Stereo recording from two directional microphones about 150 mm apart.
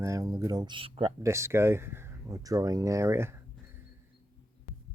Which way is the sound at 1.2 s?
20° right (ahead or behind).